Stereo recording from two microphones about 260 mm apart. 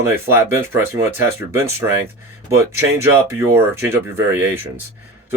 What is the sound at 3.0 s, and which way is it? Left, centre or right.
Speech, centre.